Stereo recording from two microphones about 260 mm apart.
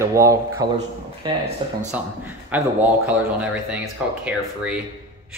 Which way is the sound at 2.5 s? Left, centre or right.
Centre.